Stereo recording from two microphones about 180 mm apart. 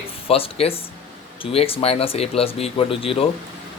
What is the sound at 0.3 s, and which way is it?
Speech, 30° left (ahead or behind).